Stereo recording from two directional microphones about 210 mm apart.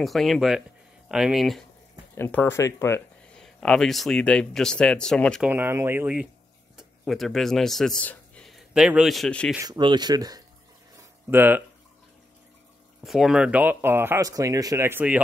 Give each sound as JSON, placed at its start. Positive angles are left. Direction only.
{"t": 0.0, "sound": "speech", "side_deg": 0}
{"t": 2.1, "sound": "speech", "side_deg": 10}
{"t": 5.5, "sound": "speech", "side_deg": -10}
{"t": 9.6, "sound": "speech", "side_deg": -20}
{"t": 13.0, "sound": "speech", "side_deg": 0}